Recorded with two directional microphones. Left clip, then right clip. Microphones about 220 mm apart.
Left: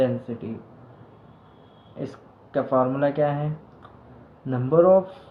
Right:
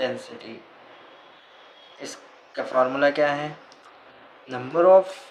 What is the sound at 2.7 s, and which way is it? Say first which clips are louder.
Speech: right 2 dB; 25° right (ahead or behind).